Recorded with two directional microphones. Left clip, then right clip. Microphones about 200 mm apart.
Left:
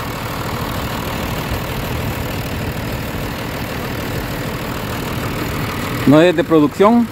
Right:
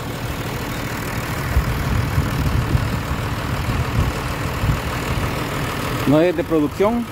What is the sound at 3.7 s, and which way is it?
Vehicle, 60° left (ahead or behind).